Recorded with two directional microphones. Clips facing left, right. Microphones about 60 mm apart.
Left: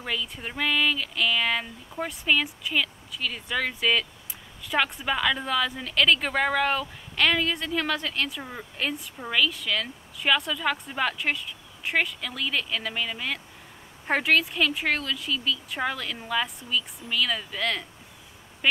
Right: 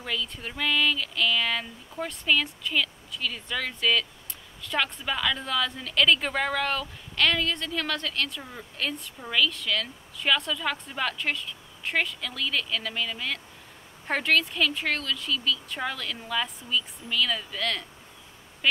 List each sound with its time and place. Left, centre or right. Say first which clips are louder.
0.0 s a woman's voice: left 1 dB; centre